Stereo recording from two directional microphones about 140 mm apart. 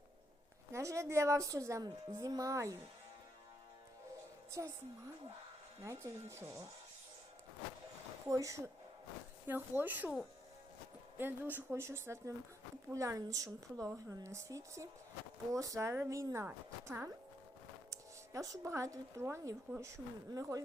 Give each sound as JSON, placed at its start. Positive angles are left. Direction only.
{"t": 0.7, "sound": "speech", "side_deg": -20}
{"t": 4.6, "sound": "speech", "side_deg": -20}
{"t": 5.8, "sound": "speech", "side_deg": -20}
{"t": 8.3, "sound": "a woman's voice", "side_deg": -20}
{"t": 11.2, "sound": "speech", "side_deg": -15}